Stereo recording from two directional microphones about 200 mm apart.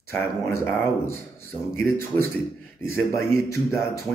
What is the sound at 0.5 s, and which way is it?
Speech, 10° left (ahead or behind).